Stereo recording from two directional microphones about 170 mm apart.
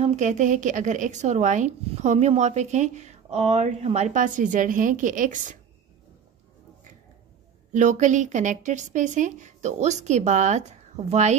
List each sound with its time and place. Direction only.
0.0 s a woman's voice: 45° right (ahead or behind)
7.7 s a woman's voice: 45° right (ahead or behind)